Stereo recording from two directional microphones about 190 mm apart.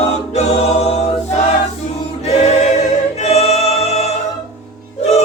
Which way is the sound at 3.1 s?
35° left (ahead or behind).